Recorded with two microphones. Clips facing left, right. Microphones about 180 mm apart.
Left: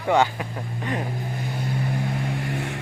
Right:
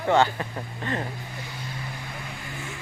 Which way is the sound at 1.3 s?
50° left (ahead or behind).